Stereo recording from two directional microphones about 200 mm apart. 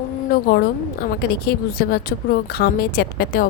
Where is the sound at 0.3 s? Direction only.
50° left (ahead or behind).